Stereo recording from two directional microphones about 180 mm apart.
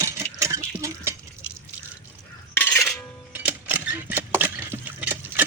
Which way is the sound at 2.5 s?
15° left (ahead or behind).